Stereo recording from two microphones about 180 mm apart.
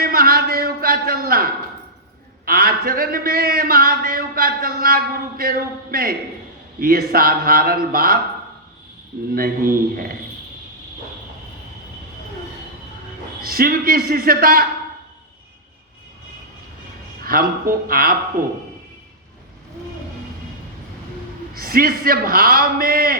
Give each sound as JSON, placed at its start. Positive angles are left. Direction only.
{"t": 0.0, "sound": "a sound", "side_deg": -55}
{"t": 2.4, "sound": "a man's voice", "side_deg": -55}
{"t": 9.3, "sound": "speech", "side_deg": -55}
{"t": 13.4, "sound": "a man's voice", "side_deg": -55}
{"t": 17.2, "sound": "speech", "side_deg": -55}
{"t": 21.5, "sound": "a man's voice", "side_deg": -55}